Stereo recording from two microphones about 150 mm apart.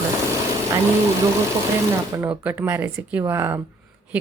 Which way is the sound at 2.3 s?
10° right (ahead or behind).